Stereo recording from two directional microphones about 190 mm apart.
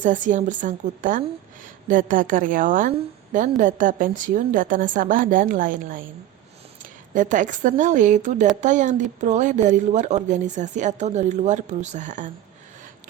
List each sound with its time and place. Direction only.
0.0 s a woman's voice: 40° right (ahead or behind)